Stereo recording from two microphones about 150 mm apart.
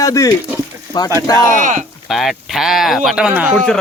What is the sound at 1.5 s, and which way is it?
Speech, 60° right (ahead or behind).